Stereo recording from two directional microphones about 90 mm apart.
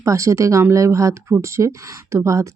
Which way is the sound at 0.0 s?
35° right (ahead or behind).